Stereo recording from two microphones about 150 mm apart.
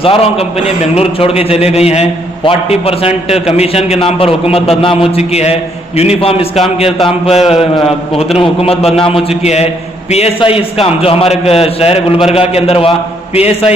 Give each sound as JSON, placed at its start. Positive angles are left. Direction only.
{"t": 0.0, "sound": "a man's voice", "side_deg": 40}
{"t": 7.7, "sound": "a man's voice", "side_deg": 0}
{"t": 8.4, "sound": "a man's voice", "side_deg": 40}